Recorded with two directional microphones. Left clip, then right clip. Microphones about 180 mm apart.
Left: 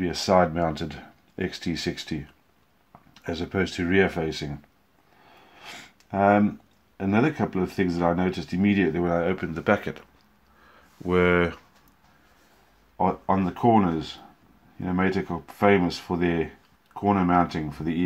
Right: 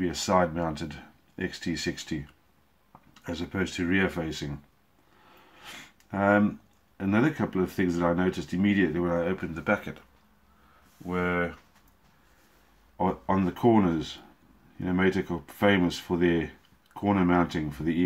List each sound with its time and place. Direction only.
0.0 s speech: 25° left (ahead or behind)
3.2 s speech: 30° left (ahead or behind)
5.6 s a sound: 20° left (ahead or behind)
7.0 s speech: 20° left (ahead or behind); by 10.0 s 45° left (ahead or behind)
11.1 s speech: 50° left (ahead or behind)
13.3 s speech: 5° left (ahead or behind)